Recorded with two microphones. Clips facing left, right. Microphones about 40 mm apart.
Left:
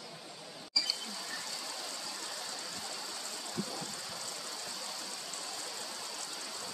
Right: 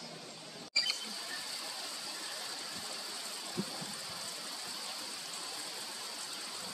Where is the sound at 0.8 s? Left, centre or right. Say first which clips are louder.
Right 1 dB; right.